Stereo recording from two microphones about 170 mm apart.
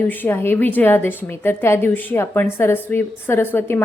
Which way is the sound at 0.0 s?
10° left (ahead or behind).